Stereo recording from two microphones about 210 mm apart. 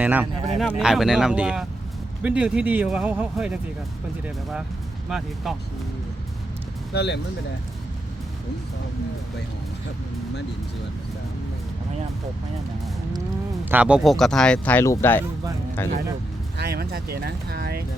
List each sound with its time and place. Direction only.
0.0 s speech: 10° right (ahead or behind)
5.0 s speech: centre (ahead or behind)
6.9 s speech: 50° left (ahead or behind)
13.7 s speech: 5° right (ahead or behind); by 15.9 s 10° left (ahead or behind)
16.6 s speech: 50° right (ahead or behind)